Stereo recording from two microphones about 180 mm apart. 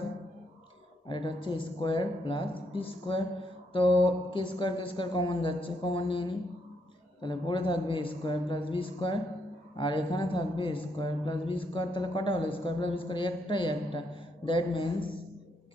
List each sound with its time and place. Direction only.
1.0 s a man's voice: 25° left (ahead or behind)